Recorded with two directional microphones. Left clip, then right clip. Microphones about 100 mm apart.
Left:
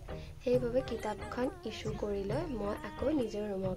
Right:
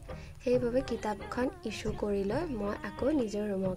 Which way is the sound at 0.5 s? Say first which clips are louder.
Right 2 dB; 35° right (ahead or behind).